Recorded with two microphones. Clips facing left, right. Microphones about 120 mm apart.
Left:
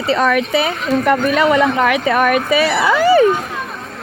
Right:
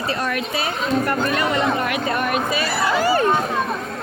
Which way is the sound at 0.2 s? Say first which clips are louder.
Left 9 dB; 90° left.